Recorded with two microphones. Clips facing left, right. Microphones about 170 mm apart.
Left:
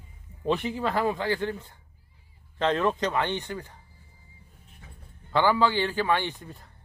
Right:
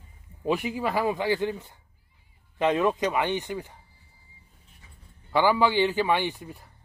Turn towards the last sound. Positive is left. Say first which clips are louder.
# right 2 dB
turn(degrees=-10)  # may be behind; listen again after turning